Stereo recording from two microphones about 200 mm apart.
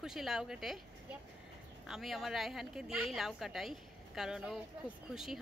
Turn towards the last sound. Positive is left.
turn(degrees=0)  # may be behind; listen again after turning